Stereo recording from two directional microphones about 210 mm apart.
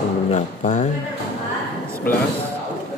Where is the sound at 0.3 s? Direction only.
35° left (ahead or behind).